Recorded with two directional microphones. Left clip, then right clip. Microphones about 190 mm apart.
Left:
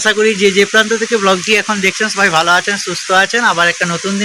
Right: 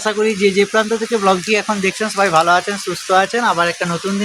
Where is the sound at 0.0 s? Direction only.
5° left (ahead or behind).